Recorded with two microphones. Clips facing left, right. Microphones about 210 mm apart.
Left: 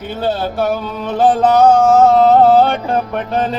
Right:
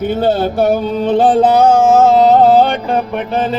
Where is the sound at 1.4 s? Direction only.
5° right (ahead or behind).